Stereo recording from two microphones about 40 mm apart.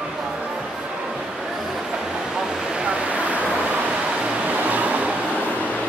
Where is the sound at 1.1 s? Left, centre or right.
Centre.